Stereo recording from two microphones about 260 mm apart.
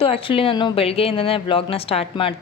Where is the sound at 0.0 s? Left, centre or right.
Left.